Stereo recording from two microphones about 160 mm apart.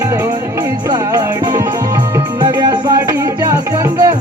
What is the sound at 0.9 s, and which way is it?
Music, 25° right (ahead or behind).